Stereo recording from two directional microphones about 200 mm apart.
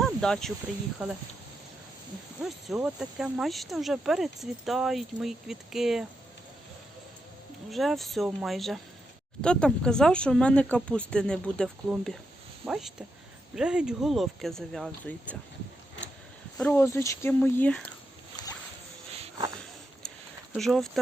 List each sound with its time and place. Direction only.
0.0 s a sound: 5° left (ahead or behind)
2.4 s speech: 5° right (ahead or behind)
7.7 s speech: centre (ahead or behind)
16.6 s speech: 10° left (ahead or behind)
20.5 s speech: centre (ahead or behind)